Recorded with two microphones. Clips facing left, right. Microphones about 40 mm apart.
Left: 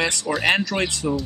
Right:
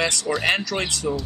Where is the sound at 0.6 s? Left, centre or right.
Left.